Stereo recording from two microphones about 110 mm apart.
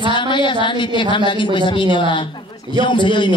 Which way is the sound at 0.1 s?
45° left (ahead or behind).